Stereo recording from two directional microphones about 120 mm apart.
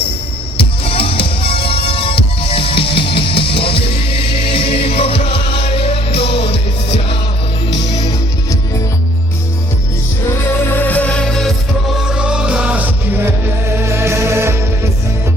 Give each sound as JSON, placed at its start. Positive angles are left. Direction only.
{"t": 0.9, "sound": "music", "side_deg": 50}
{"t": 7.9, "sound": "music", "side_deg": 35}
{"t": 10.2, "sound": "music", "side_deg": 20}
{"t": 11.9, "sound": "music", "side_deg": -5}